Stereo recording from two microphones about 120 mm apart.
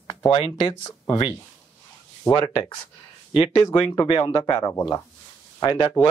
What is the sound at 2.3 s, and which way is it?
Speech, 15° left (ahead or behind).